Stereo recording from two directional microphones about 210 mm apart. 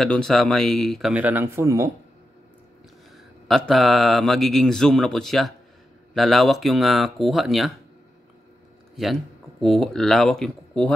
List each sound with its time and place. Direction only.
0.0 s speech: centre (ahead or behind); by 1.9 s 15° right (ahead or behind)
3.4 s speech: centre (ahead or behind)
8.9 s speech: centre (ahead or behind)